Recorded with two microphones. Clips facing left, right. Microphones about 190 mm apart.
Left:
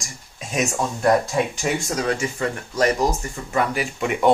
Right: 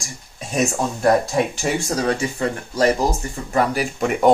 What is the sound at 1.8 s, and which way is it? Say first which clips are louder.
Speech: right 2 dB; 35° right (ahead or behind).